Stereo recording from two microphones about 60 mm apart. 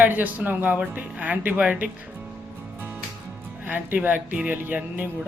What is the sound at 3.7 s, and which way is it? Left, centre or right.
Speech, right.